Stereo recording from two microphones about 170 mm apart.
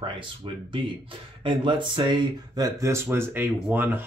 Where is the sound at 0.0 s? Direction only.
30° right (ahead or behind).